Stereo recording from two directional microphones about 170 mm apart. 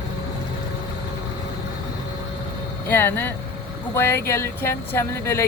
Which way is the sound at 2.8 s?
10° left (ahead or behind).